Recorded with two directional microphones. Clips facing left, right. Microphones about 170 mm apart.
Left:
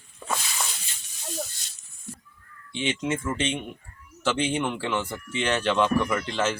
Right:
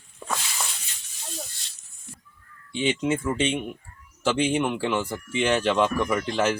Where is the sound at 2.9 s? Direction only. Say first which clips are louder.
Right 3 dB; 10° right (ahead or behind).